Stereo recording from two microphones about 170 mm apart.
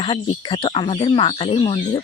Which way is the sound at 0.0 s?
30° left (ahead or behind).